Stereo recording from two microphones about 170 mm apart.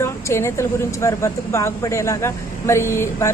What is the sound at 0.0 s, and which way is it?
Speech, 15° left (ahead or behind).